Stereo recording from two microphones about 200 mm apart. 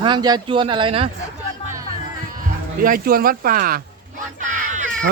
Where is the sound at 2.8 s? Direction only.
45° right (ahead or behind).